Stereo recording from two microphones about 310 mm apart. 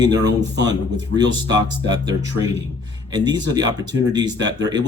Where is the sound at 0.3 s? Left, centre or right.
Right.